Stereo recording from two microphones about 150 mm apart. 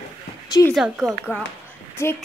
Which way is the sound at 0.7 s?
Centre (ahead or behind).